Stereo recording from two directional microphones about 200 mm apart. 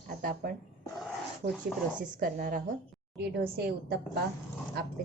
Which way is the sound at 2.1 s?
45° right (ahead or behind).